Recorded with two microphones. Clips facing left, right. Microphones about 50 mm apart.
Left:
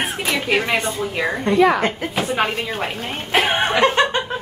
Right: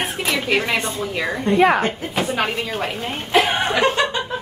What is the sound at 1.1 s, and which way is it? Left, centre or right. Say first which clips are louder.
A woman's voice: even; centre.